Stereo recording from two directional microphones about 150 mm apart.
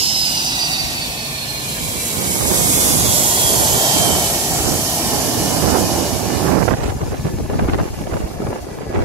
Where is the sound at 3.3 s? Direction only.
35° right (ahead or behind).